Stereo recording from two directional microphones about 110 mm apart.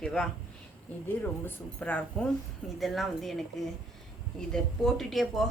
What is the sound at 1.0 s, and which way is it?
Speech, 15° left (ahead or behind).